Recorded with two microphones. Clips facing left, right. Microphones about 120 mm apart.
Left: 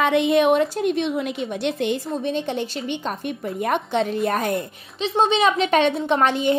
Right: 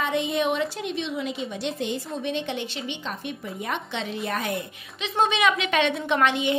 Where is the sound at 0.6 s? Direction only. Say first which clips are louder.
Left 7 dB; 45° left (ahead or behind); by 2.0 s 65° left (ahead or behind).